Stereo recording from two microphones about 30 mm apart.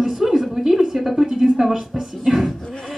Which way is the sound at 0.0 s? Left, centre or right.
Centre.